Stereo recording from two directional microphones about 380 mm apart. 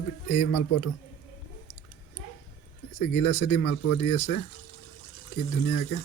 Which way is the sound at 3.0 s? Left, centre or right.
Left.